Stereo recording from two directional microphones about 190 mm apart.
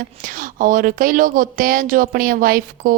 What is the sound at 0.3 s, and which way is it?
Speech, 45° right (ahead or behind).